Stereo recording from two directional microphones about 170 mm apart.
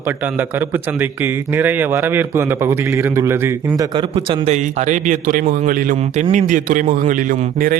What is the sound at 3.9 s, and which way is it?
A man's voice, 35° right (ahead or behind).